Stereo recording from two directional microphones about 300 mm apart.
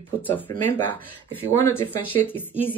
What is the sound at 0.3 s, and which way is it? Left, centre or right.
Speech, centre.